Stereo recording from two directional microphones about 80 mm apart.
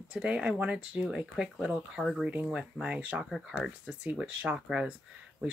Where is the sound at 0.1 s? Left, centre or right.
Centre.